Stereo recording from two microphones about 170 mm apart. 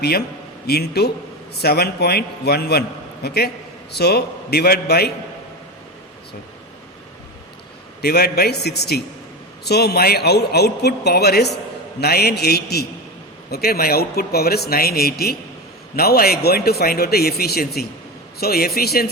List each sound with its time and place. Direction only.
0.7 s a man's voice: 70° left (ahead or behind)
8.0 s a man's voice: 70° left (ahead or behind)